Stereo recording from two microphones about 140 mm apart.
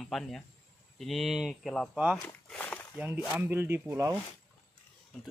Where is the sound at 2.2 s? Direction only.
10° left (ahead or behind).